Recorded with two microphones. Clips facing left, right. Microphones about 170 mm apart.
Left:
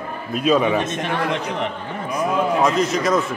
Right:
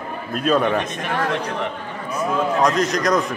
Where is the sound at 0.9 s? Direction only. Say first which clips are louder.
Left 1 dB; 20° left (ahead or behind); by 3.3 s centre (ahead or behind).